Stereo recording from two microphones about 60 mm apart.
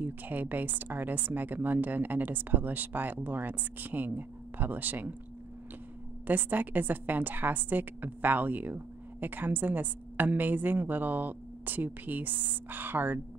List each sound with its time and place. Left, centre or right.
0.0 s a woman's voice: right
6.2 s a woman's voice: right